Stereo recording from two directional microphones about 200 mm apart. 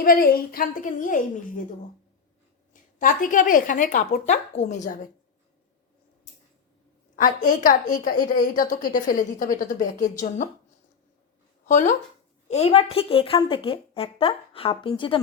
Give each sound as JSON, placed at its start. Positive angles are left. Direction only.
{"t": 0.0, "sound": "a woman's voice", "side_deg": 45}
{"t": 3.0, "sound": "a woman's voice", "side_deg": 40}
{"t": 7.2, "sound": "a woman's voice", "side_deg": 40}
{"t": 11.6, "sound": "a woman's voice", "side_deg": 40}